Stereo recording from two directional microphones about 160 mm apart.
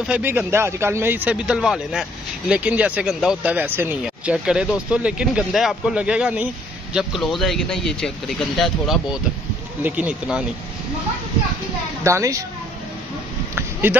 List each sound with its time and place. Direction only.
0.0 s a man's voice: 10° right (ahead or behind)
12.0 s a child's voice: 20° right (ahead or behind)
13.6 s a sound: 15° right (ahead or behind)